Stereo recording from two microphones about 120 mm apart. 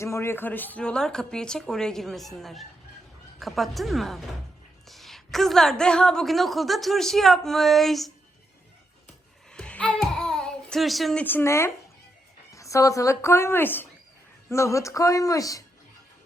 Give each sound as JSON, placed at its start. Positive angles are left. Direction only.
{"t": 0.0, "sound": "a woman's voice", "side_deg": 20}
{"t": 9.5, "sound": "babbling", "side_deg": 10}
{"t": 11.2, "sound": "a woman's voice", "side_deg": 15}